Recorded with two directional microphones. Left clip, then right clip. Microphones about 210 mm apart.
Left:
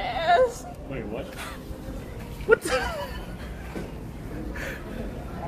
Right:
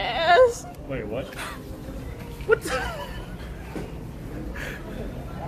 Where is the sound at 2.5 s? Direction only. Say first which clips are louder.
Left 1 dB; 25° left (ahead or behind).